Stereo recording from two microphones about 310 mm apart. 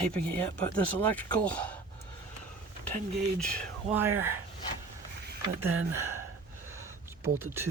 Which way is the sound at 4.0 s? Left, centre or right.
Centre.